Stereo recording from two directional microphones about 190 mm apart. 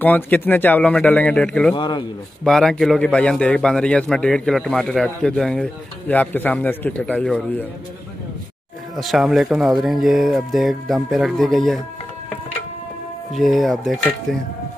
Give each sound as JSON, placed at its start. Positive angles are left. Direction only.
{"t": 0.0, "sound": "speech", "side_deg": 10}
{"t": 1.8, "sound": "a man's voice", "side_deg": 25}
{"t": 2.4, "sound": "a man's voice", "side_deg": 5}
{"t": 8.9, "sound": "a man's voice", "side_deg": 0}
{"t": 13.3, "sound": "a man's voice", "side_deg": 0}